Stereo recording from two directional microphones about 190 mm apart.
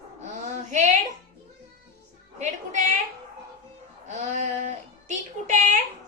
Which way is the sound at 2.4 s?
40° right (ahead or behind).